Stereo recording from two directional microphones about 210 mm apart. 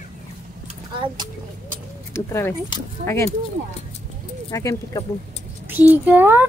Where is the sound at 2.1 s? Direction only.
10° left (ahead or behind).